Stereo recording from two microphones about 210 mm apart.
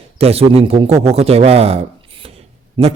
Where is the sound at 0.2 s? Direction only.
30° right (ahead or behind).